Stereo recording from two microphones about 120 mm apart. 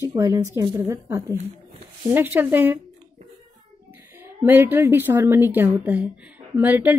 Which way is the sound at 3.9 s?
20° right (ahead or behind).